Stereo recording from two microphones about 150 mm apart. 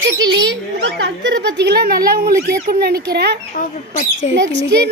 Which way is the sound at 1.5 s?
90° right.